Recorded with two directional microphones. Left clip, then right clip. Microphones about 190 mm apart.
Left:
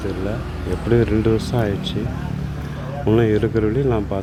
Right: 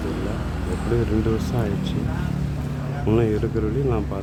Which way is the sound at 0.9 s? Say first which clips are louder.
Left 6 dB; 20° left (ahead or behind).